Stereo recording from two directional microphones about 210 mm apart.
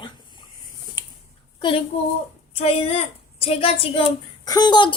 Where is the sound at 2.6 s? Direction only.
30° left (ahead or behind).